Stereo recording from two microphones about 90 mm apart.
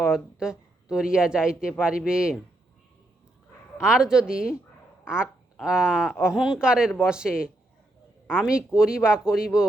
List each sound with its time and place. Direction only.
0.1 s speech: 5° right (ahead or behind)
3.8 s speech: 10° right (ahead or behind)